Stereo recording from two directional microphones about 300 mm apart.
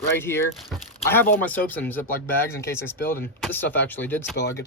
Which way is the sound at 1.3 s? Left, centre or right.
Centre.